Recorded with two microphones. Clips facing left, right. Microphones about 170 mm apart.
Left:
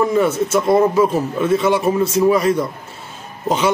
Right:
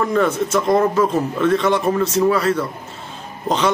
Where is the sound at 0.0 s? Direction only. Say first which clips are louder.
Left 2 dB; 5° left (ahead or behind).